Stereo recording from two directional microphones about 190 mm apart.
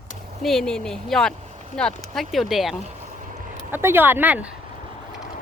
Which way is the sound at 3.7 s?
10° right (ahead or behind).